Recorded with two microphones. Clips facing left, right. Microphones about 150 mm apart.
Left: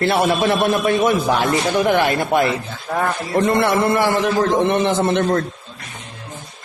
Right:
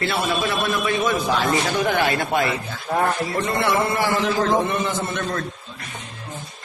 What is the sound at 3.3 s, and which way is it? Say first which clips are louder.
Speech: left 5 dB; 55° left (ahead or behind).